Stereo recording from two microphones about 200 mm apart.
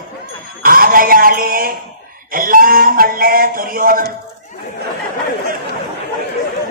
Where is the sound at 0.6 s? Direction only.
45° right (ahead or behind).